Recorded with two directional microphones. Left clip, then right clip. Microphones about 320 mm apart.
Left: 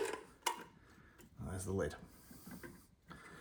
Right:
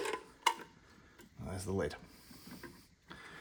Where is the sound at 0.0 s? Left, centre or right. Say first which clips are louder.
Right 6 dB; centre.